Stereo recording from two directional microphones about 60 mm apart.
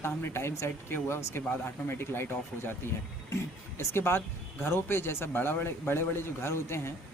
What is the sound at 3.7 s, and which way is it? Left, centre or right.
A man's voice, left.